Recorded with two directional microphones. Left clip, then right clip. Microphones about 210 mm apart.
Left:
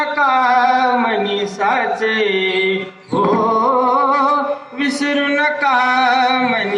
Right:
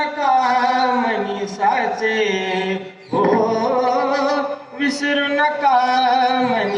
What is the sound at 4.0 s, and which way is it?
Humming, 50° left (ahead or behind).